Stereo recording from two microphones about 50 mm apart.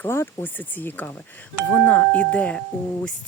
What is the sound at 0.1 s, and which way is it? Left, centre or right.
Speech, left.